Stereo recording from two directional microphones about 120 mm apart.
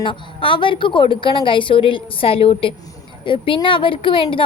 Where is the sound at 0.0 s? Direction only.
45° left (ahead or behind).